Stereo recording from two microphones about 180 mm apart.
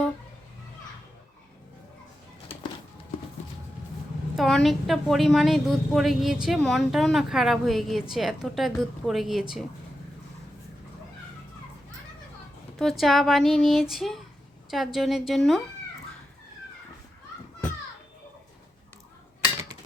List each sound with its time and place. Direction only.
2.5 s music: 30° left (ahead or behind)
4.4 s a woman's voice: centre (ahead or behind)
12.8 s a woman's voice: centre (ahead or behind)